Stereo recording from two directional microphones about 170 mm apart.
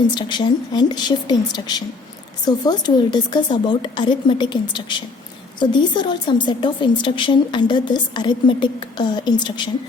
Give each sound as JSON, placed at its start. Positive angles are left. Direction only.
{"t": 0.1, "sound": "a woman's voice", "side_deg": 25}